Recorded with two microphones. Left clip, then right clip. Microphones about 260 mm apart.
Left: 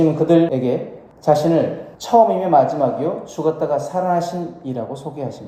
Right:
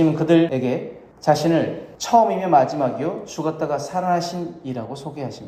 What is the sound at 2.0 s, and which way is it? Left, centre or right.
Speech, right.